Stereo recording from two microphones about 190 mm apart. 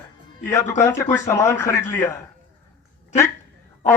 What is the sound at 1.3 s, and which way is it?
Speech, 15° left (ahead or behind).